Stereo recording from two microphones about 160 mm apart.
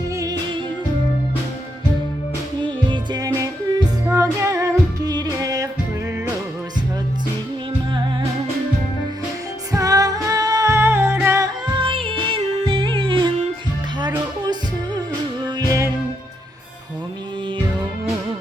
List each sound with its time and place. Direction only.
0.1 s music: 20° right (ahead or behind)
2.8 s music: 30° right (ahead or behind)
9.7 s music: 20° right (ahead or behind)
11.6 s music: 30° right (ahead or behind)
14.4 s music: 25° right (ahead or behind)